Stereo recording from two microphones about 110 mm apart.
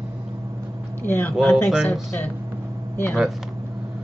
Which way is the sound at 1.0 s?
20° left (ahead or behind).